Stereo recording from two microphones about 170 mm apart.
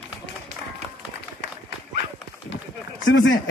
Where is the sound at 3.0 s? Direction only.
90° left.